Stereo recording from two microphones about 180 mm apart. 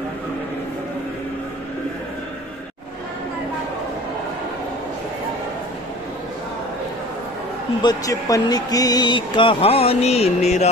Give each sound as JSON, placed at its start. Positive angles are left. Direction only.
{"t": 7.8, "sound": "speech", "side_deg": 20}